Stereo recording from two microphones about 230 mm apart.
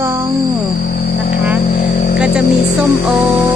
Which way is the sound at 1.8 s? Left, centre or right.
Left.